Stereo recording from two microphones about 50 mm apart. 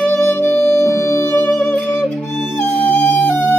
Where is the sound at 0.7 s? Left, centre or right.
Left.